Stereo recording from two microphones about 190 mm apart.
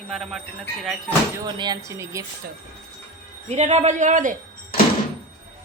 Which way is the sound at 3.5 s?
40° right (ahead or behind).